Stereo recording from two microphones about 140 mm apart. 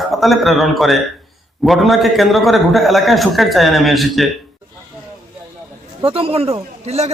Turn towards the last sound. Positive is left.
turn(degrees=-45)  # may be behind; listen again after turning